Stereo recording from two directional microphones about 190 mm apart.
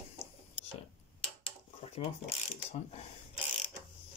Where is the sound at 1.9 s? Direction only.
35° left (ahead or behind).